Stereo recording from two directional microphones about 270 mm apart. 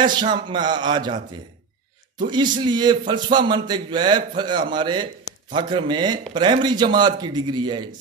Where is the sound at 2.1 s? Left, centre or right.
Centre.